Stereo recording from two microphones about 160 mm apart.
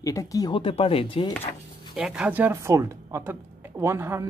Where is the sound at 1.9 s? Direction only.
5° right (ahead or behind).